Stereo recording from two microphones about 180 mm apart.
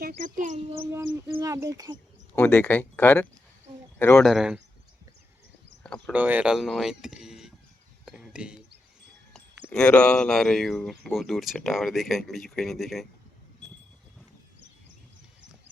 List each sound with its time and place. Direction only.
0.0 s speech: 50° right (ahead or behind)
0.7 s speech: 15° right (ahead or behind)
2.3 s speech: 10° left (ahead or behind)
4.3 s speech: 5° right (ahead or behind)
5.8 s a sound: 5° left (ahead or behind)
6.1 s speech: 10° right (ahead or behind)
8.0 s a sound: 5° right (ahead or behind)
9.6 s speech: 5° left (ahead or behind)